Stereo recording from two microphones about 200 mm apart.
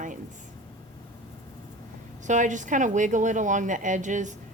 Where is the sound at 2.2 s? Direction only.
40° right (ahead or behind).